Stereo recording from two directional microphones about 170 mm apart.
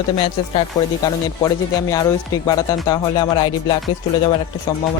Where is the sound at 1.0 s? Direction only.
20° left (ahead or behind).